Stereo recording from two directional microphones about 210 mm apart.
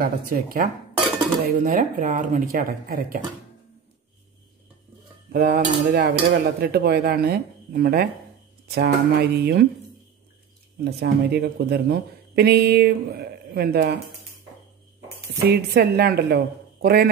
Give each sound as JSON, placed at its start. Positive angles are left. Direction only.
{"t": 0.0, "sound": "speech", "side_deg": -45}
{"t": 5.3, "sound": "speech", "side_deg": -50}
{"t": 10.8, "sound": "speech", "side_deg": -50}
{"t": 15.5, "sound": "speech", "side_deg": -50}